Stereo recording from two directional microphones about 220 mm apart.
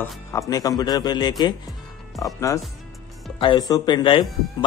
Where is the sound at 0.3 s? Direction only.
15° left (ahead or behind).